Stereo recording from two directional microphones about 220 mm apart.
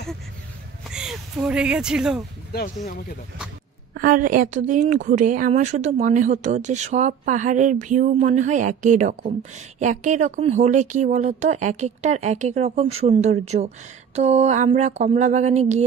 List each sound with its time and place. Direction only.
0.9 s speech: 5° right (ahead or behind)
2.5 s speech: 45° left (ahead or behind)
3.9 s a woman's voice: 40° right (ahead or behind)